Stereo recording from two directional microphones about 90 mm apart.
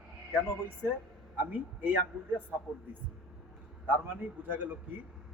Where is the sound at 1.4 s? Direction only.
20° right (ahead or behind).